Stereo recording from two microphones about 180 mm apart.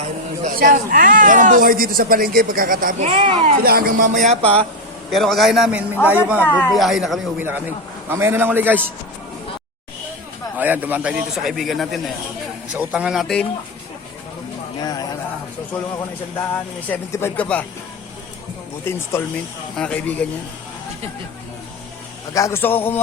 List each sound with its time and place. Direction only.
0.4 s speech: 50° right (ahead or behind)
3.1 s speech: 30° right (ahead or behind)
3.6 s speech: 55° right (ahead or behind); by 4.6 s 35° right (ahead or behind)
5.1 s a man's voice: centre (ahead or behind)
6.4 s speech: 10° left (ahead or behind)
6.7 s a man's voice: centre (ahead or behind)
10.6 s a man's voice: 10° right (ahead or behind)
14.8 s speech: 20° left (ahead or behind)
16.9 s speech: 15° left (ahead or behind)
18.9 s speech: 15° left (ahead or behind)
22.3 s speech: 15° left (ahead or behind)